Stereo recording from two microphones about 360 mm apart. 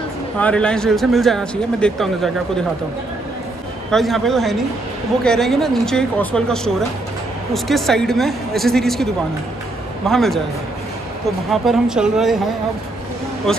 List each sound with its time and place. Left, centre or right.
0.4 s speech: centre
3.9 s speech: centre
11.5 s speech: centre